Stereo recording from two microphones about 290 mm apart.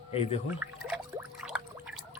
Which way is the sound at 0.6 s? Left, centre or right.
Centre.